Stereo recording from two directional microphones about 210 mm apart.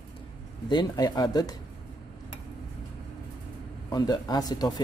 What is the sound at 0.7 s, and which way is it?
Speech, 20° left (ahead or behind).